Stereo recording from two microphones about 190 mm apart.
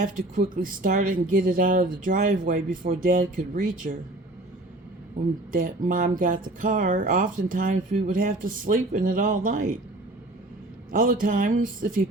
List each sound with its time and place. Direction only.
0.0 s speech: 45° right (ahead or behind)
5.5 s speech: 45° right (ahead or behind)
10.9 s speech: 45° right (ahead or behind)